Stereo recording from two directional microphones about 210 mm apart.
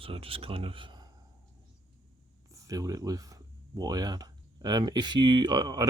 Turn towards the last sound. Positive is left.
turn(degrees=-20)  # may be behind; listen again after turning